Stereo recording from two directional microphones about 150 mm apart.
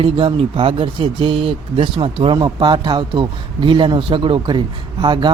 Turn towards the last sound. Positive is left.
turn(degrees=-30)  # may be behind; listen again after turning